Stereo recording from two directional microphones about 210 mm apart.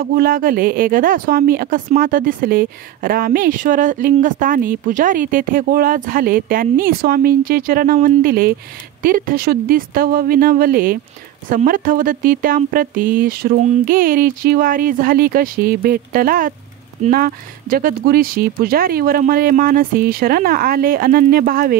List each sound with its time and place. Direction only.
0.0 s a woman's voice: 45° right (ahead or behind)